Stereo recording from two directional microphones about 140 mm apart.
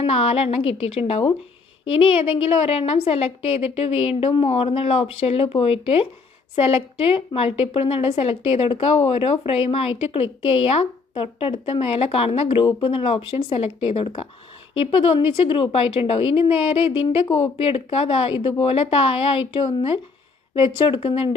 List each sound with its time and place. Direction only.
0.0 s a woman's voice: 45° left (ahead or behind)